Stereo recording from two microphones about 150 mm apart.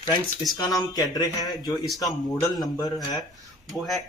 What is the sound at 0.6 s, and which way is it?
Speech, 25° left (ahead or behind).